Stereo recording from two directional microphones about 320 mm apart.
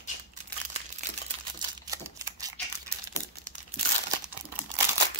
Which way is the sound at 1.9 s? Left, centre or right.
Centre.